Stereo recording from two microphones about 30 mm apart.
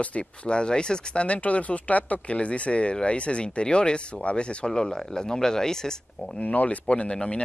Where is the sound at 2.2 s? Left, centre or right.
Left.